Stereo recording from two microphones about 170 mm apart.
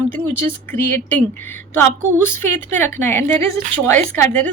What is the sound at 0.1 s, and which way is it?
A woman's voice, 10° left (ahead or behind).